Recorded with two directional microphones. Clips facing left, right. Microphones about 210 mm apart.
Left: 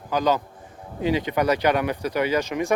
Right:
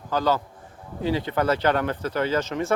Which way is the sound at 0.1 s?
15° left (ahead or behind).